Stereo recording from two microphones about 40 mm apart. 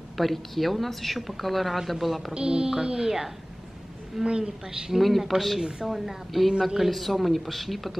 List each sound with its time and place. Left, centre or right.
0.2 s speech: centre
2.3 s a woman's voice: right
4.2 s a woman's voice: right
4.8 s speech: centre